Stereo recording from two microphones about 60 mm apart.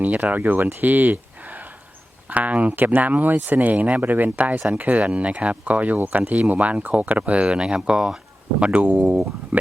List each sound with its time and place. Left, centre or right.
0.0 s speech: right
0.8 s a sound: right
2.3 s speech: right